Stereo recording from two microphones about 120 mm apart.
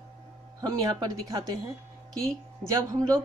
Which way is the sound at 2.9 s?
30° right (ahead or behind).